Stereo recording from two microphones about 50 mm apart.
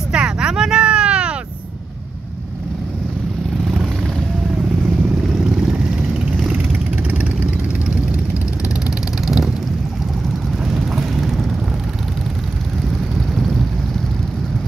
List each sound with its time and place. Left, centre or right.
0.1 s vehicle: centre
9.2 s vehicle: centre
10.7 s vehicle: centre